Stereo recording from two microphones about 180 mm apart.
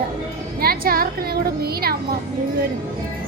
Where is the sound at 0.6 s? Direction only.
55° right (ahead or behind).